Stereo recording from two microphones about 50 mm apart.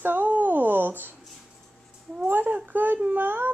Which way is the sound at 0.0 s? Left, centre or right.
Right.